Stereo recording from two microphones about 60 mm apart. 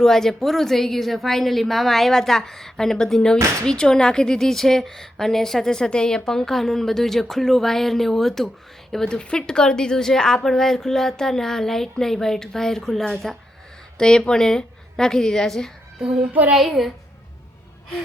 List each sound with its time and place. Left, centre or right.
0.0 s a woman's voice: centre
16.0 s child singing: centre
16.5 s a woman's voice: centre